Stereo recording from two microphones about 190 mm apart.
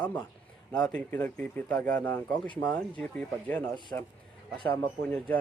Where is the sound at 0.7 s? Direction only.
5° left (ahead or behind).